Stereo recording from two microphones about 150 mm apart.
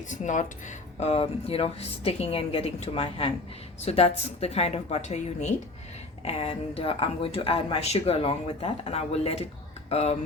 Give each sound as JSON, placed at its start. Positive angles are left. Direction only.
{"t": 0.1, "sound": "speech", "side_deg": 55}
{"t": 0.9, "sound": "a woman's voice", "side_deg": 45}